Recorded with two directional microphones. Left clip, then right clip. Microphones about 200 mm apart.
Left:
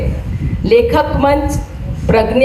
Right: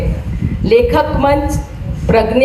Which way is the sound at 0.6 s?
40° left (ahead or behind).